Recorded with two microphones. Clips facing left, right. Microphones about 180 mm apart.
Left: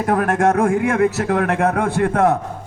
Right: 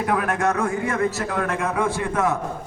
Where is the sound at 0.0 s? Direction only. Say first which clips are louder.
Left 5 dB; 45° left (ahead or behind).